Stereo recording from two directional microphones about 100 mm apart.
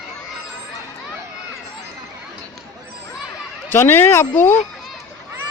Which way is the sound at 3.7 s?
25° left (ahead or behind).